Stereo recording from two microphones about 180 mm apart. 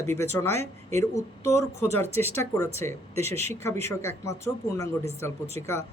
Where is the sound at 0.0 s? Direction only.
15° left (ahead or behind).